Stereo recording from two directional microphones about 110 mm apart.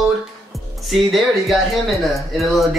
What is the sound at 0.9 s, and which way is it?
Speech, centre (ahead or behind).